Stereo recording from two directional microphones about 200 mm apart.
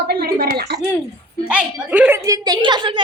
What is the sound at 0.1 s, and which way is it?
Speech, 50° right (ahead or behind).